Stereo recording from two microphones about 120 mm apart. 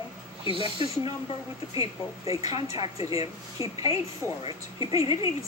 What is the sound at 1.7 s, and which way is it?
Speech, 30° right (ahead or behind).